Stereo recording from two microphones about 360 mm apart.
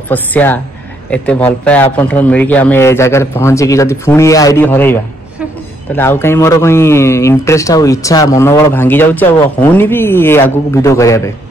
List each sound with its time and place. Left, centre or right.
0.1 s speech: centre
5.9 s speech: centre